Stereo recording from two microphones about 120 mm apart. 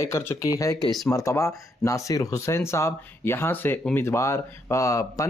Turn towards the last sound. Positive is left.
turn(degrees=25)  # may be behind; listen again after turning